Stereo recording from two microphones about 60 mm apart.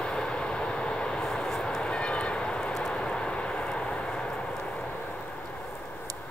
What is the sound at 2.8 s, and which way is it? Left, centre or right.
Vehicle, centre.